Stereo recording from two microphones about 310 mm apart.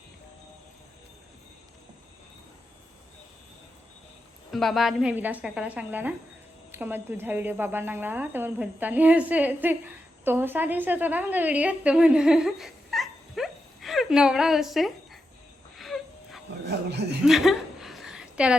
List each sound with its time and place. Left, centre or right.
4.5 s a woman's voice: centre
15.8 s a sound: centre
16.6 s speech: right
17.2 s chuckle: centre